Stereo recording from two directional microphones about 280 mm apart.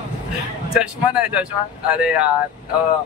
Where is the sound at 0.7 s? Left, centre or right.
Centre.